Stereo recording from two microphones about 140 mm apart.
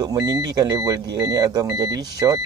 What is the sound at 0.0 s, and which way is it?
Speech, 25° right (ahead or behind).